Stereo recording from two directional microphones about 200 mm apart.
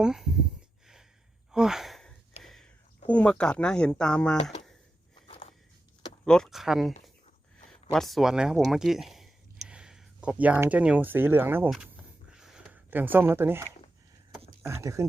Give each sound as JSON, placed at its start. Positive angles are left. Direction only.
{"t": 0.0, "sound": "speech", "side_deg": 0}
{"t": 1.5, "sound": "a sound", "side_deg": 0}
{"t": 3.1, "sound": "speech", "side_deg": 5}
{"t": 5.3, "sound": "walk", "side_deg": 30}
{"t": 6.2, "sound": "speech", "side_deg": 5}
{"t": 7.9, "sound": "speech", "side_deg": 0}
{"t": 12.3, "sound": "a sound", "side_deg": -5}
{"t": 14.6, "sound": "speech", "side_deg": -15}